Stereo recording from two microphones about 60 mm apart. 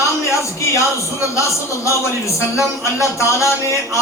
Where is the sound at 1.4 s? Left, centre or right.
Left.